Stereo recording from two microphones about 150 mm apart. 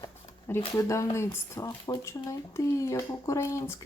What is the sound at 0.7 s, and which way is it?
Speech, 20° left (ahead or behind).